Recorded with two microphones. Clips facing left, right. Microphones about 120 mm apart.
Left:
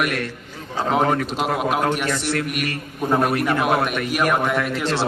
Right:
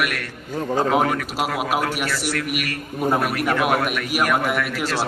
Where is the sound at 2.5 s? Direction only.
30° left (ahead or behind).